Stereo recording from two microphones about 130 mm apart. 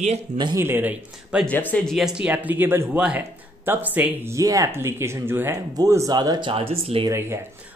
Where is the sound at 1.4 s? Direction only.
10° left (ahead or behind); by 4.4 s 15° right (ahead or behind).